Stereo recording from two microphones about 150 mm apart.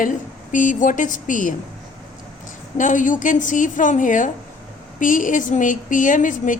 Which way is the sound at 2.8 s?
60° left (ahead or behind).